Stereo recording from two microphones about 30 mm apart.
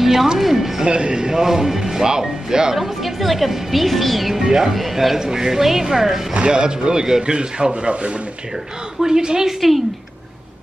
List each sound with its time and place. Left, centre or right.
0.0 s music: centre
0.8 s a man's voice: right
1.4 s speech: centre
2.8 s a woman's voice: centre
4.4 s a man's voice: right
4.7 s a woman's voice: centre
5.1 s speech: centre
6.5 s a man's voice: right
7.3 s a man's voice: right
9.0 s a man's voice: right